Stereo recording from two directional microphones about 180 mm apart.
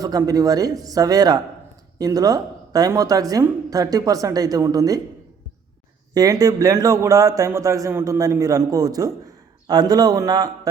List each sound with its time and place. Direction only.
0.0 s speech: 20° right (ahead or behind)
6.1 s speech: 20° right (ahead or behind)